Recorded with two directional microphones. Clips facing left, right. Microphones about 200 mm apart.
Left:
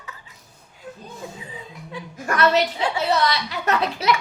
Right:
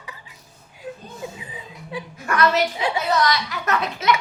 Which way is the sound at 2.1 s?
35° left (ahead or behind).